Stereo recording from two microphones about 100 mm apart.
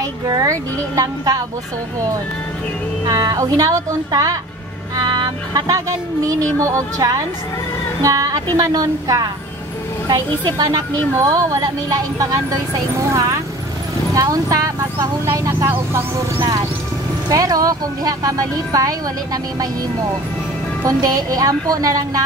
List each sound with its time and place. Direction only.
0.0 s speech: 35° right (ahead or behind)
3.1 s speech: 40° right (ahead or behind)
8.0 s speech: 35° right (ahead or behind)
17.3 s speech: 35° right (ahead or behind)
20.8 s speech: 40° right (ahead or behind)